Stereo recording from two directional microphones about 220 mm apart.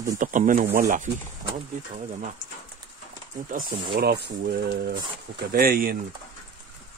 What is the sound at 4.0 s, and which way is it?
Speech, 50° right (ahead or behind).